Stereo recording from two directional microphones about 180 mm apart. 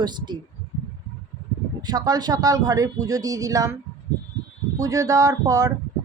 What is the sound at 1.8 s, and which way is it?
Speech, 20° right (ahead or behind).